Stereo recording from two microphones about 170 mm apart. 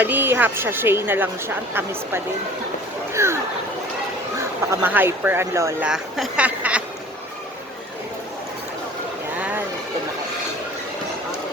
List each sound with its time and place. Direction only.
0.0 s a woman's voice: 10° right (ahead or behind)
4.7 s a woman's voice: 10° right (ahead or behind)
5.8 s speech: centre (ahead or behind)